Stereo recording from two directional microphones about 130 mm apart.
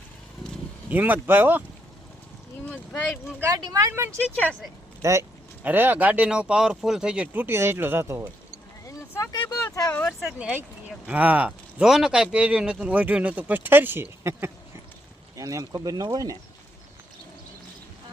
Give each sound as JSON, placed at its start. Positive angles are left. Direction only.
{"t": 0.9, "sound": "speech", "side_deg": -15}
{"t": 3.4, "sound": "speech", "side_deg": -25}
{"t": 8.9, "sound": "vehicle", "side_deg": 25}
{"t": 9.5, "sound": "a sound", "side_deg": 25}
{"t": 10.0, "sound": "speech", "side_deg": 0}
{"t": 10.3, "sound": "speech", "side_deg": -10}